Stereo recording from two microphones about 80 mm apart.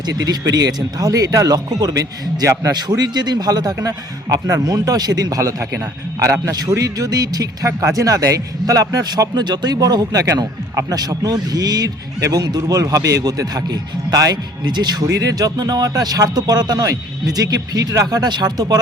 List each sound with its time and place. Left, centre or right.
0.0 s a man's voice: right
14.6 s speech: right
15.0 s a man's voice: right